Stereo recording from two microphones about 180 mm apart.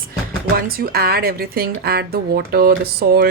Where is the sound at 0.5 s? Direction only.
55° right (ahead or behind).